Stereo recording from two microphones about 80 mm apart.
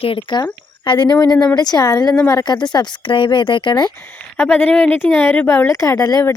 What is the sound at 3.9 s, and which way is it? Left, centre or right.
Speech, left.